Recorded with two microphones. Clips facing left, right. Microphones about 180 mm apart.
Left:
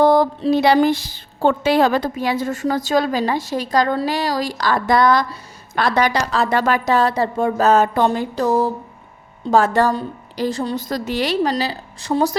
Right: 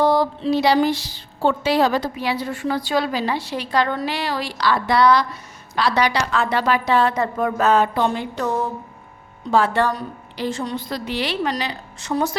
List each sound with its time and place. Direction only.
0.0 s a woman's voice: 50° left (ahead or behind); by 7.7 s 30° left (ahead or behind)
7.7 s a woman's voice: 45° left (ahead or behind)